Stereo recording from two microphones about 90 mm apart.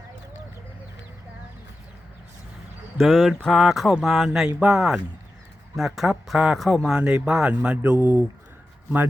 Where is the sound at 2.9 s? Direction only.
5° left (ahead or behind); by 8.3 s 15° right (ahead or behind).